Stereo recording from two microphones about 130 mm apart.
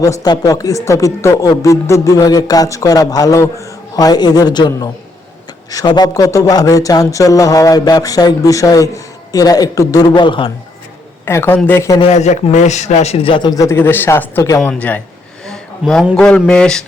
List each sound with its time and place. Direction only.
0.0 s speech: 25° left (ahead or behind)
11.3 s speech: 20° left (ahead or behind)
12.0 s a man's voice: 60° left (ahead or behind); by 13.5 s 45° left (ahead or behind)
13.5 s speech: 25° left (ahead or behind)
15.4 s a sound: 5° left (ahead or behind)
16.1 s speech: 5° left (ahead or behind)